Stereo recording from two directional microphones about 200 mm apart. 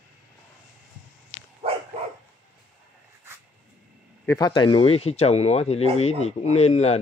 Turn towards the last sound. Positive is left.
turn(degrees=30)  # may be behind; listen again after turning